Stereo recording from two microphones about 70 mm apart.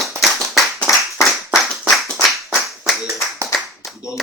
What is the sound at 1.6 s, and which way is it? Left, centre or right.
Clapping, centre.